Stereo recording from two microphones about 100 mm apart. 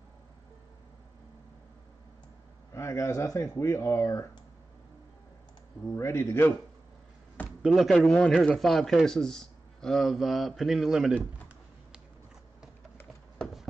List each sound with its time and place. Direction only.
2.7 s speech: 30° left (ahead or behind)
5.9 s speech: 30° left (ahead or behind)
7.6 s speech: centre (ahead or behind)